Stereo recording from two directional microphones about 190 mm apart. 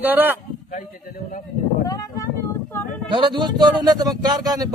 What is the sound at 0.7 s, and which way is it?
Speech, 45° left (ahead or behind).